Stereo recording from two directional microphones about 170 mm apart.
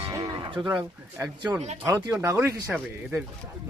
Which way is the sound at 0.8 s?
10° right (ahead or behind).